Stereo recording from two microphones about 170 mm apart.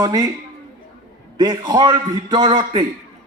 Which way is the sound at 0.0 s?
20° right (ahead or behind).